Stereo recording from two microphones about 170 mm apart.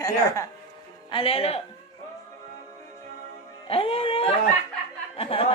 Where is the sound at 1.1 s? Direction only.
35° left (ahead or behind).